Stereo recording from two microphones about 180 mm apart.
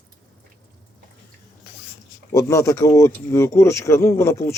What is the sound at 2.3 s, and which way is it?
Speech, 15° left (ahead or behind).